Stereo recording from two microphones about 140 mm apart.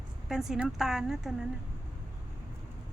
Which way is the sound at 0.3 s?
Centre (ahead or behind).